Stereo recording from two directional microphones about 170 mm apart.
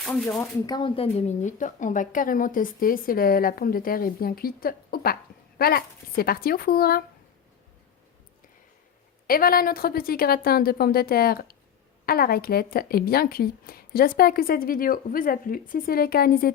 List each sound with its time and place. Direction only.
0.0 s speech: 5° left (ahead or behind)
0.7 s a woman's voice: 30° left (ahead or behind); by 7.0 s 60° left (ahead or behind)
9.2 s a woman's voice: 60° left (ahead or behind)